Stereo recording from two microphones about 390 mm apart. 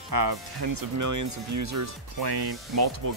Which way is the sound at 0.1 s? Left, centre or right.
Right.